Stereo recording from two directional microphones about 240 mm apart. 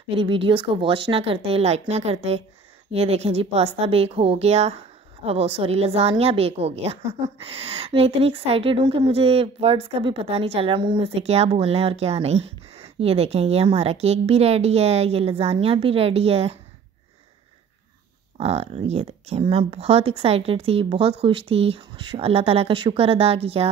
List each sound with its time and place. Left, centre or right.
0.1 s a woman's voice: right
18.4 s a woman's voice: right